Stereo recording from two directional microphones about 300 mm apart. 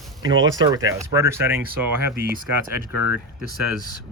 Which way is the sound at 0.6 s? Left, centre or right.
Centre.